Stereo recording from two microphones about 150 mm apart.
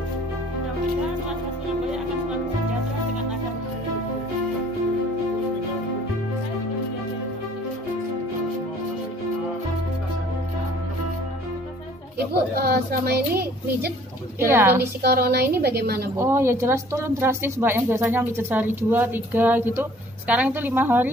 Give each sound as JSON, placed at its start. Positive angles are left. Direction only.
{"t": 12.5, "sound": "a child's voice", "side_deg": -90}
{"t": 14.4, "sound": "speech", "side_deg": -15}
{"t": 15.0, "sound": "a child's voice", "side_deg": -90}
{"t": 16.2, "sound": "speech", "side_deg": -15}